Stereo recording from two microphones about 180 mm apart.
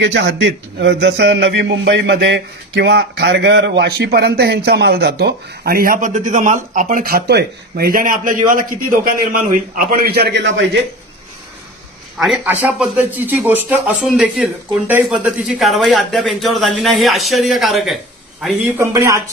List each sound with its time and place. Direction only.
0.0 s a man's voice: 80° right
12.2 s a man's voice: 5° right (ahead or behind)